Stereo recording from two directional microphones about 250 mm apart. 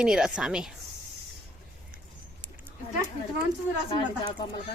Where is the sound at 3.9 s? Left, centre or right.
Centre.